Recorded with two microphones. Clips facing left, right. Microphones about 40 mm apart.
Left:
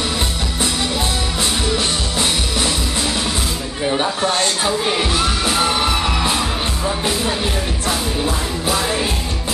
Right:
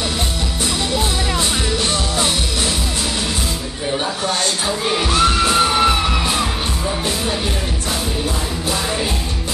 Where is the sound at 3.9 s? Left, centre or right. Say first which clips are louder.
Left 2 dB; centre.